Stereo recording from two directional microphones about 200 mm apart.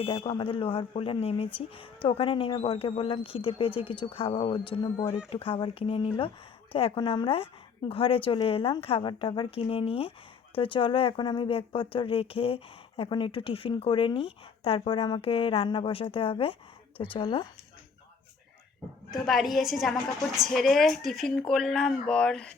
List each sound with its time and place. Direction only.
0.0 s speech: 25° left (ahead or behind)
19.1 s a woman's voice: centre (ahead or behind)